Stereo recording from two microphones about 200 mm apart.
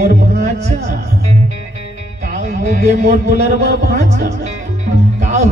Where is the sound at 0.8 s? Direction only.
35° right (ahead or behind).